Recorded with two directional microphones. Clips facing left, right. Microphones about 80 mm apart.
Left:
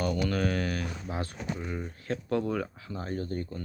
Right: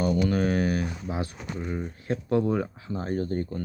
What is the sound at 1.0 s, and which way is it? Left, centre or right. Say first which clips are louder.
Speech: right 2 dB; centre.